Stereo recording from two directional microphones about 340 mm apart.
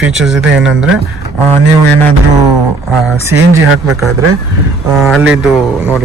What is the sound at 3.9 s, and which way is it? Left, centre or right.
Speech, centre.